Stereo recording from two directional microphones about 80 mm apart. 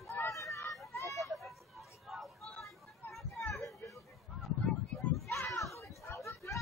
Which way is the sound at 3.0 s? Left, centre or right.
Left.